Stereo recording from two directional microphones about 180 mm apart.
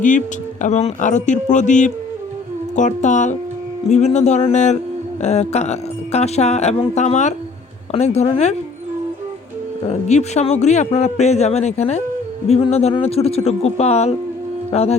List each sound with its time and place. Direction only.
0.6 s a man's voice: 40° left (ahead or behind)
9.8 s a man's voice: 40° left (ahead or behind)
14.7 s music: 35° left (ahead or behind)